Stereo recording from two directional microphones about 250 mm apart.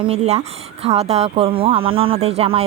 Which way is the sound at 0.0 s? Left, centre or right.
Right.